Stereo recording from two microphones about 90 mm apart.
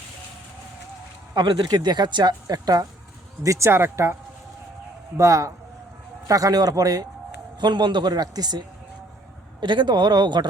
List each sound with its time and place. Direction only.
1.4 s speech: 60° right (ahead or behind)
3.4 s speech: 35° right (ahead or behind)
7.6 s speech: 55° right (ahead or behind)
9.6 s speech: 60° right (ahead or behind)